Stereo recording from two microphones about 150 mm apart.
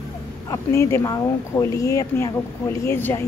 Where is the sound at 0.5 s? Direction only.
20° left (ahead or behind).